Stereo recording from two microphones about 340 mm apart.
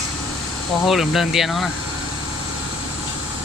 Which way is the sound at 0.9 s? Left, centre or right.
Centre.